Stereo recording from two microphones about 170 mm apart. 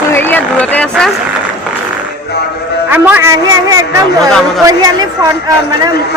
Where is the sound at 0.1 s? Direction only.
10° left (ahead or behind).